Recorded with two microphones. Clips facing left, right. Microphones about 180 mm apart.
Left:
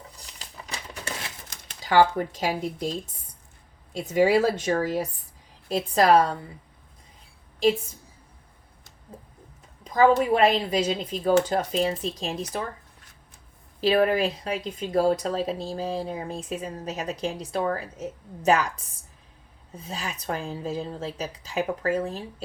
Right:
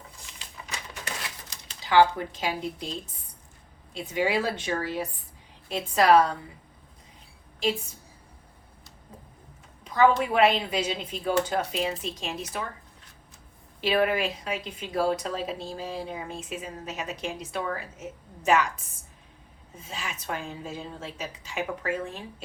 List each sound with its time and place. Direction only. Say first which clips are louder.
0.2 s crumpling: left 1 dB; 40° left (ahead or behind)
1.5 s speech: left 3 dB; 45° left (ahead or behind)
3.9 s speech: left 6 dB; 40° left (ahead or behind)
9.8 s speech: left 2 dB; 35° left (ahead or behind)
13.8 s speech: left 3 dB; 35° left (ahead or behind)
19.7 s speech: left 3 dB; 35° left (ahead or behind)